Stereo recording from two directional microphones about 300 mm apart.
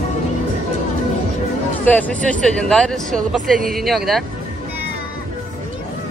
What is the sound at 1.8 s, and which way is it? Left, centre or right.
Speech, centre.